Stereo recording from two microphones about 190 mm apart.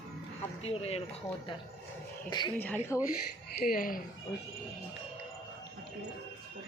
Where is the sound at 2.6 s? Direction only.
10° left (ahead or behind).